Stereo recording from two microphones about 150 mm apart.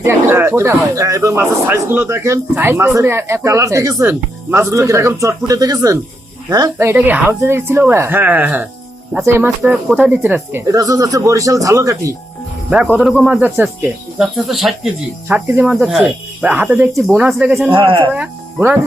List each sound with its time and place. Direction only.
0.0 s speech: 15° right (ahead or behind)
12.7 s speech: 10° right (ahead or behind)
17.7 s speech: 35° right (ahead or behind)
18.1 s speech: 10° right (ahead or behind)